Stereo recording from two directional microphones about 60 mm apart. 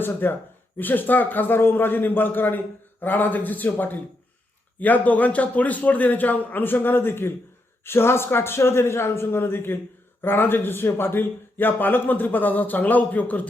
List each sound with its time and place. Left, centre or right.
0.0 s a man's voice: left